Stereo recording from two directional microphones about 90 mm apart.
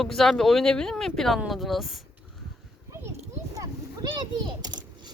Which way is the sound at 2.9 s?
30° right (ahead or behind).